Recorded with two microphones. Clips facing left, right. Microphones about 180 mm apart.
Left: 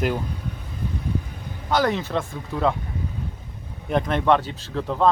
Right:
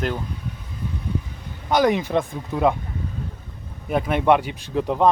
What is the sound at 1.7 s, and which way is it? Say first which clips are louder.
Speech: right 3 dB; 15° right (ahead or behind).